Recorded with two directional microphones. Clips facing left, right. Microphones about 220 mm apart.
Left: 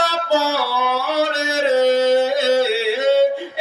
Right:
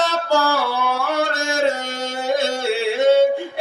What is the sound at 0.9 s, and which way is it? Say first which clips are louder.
Yodeling: left 2 dB; 5° left (ahead or behind).